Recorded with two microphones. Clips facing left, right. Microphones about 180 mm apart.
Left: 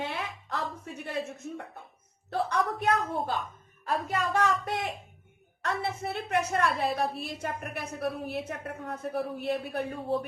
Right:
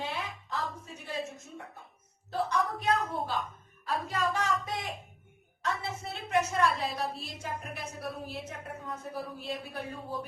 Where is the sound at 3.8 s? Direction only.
60° left (ahead or behind).